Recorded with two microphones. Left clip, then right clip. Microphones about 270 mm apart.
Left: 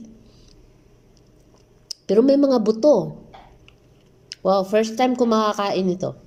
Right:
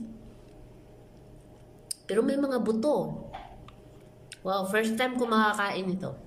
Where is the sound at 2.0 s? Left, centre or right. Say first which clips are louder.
Left 11 dB; left.